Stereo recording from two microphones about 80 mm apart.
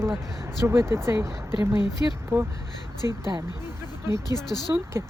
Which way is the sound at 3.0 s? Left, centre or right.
Right.